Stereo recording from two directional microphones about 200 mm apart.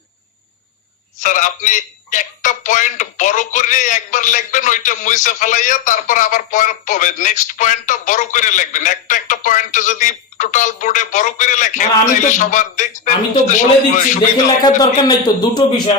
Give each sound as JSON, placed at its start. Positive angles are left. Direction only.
{"t": 1.2, "sound": "a man's voice", "side_deg": 40}
{"t": 14.6, "sound": "speech", "side_deg": 20}